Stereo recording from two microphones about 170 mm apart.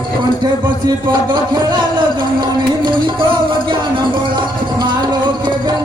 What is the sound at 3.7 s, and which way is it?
Music, 30° right (ahead or behind).